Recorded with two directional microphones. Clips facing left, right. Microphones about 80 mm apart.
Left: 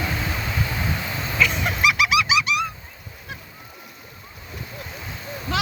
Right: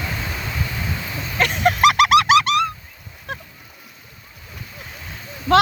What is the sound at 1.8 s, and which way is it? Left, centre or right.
Goose, right.